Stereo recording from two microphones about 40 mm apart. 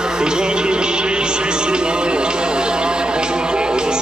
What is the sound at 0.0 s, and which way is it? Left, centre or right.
Music, centre.